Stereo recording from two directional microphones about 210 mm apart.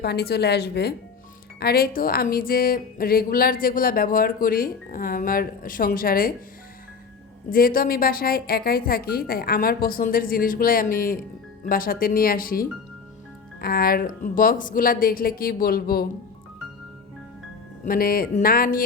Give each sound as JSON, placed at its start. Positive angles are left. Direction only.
{"t": 0.0, "sound": "a woman's voice", "side_deg": 50}
{"t": 7.5, "sound": "a woman's voice", "side_deg": 45}
{"t": 17.8, "sound": "a woman's voice", "side_deg": 45}